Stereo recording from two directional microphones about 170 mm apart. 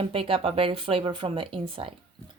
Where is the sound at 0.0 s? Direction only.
35° right (ahead or behind).